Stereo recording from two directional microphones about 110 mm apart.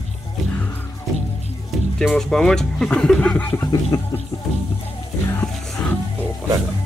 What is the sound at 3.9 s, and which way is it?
Music, 30° left (ahead or behind).